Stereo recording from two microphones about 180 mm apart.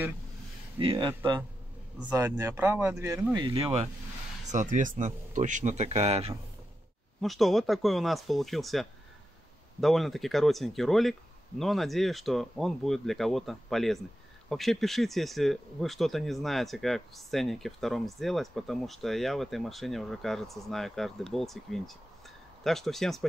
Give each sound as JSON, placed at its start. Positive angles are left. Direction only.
{"t": 0.7, "sound": "speech", "side_deg": -25}
{"t": 2.1, "sound": "speech", "side_deg": -15}
{"t": 3.3, "sound": "speech", "side_deg": -25}
{"t": 4.5, "sound": "speech", "side_deg": -45}
{"t": 7.2, "sound": "speech", "side_deg": 0}